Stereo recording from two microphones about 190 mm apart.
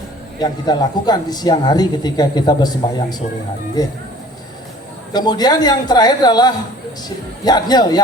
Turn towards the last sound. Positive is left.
turn(degrees=20)  # may be behind; listen again after turning